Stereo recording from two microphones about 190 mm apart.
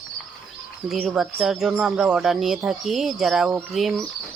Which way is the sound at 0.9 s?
Centre (ahead or behind).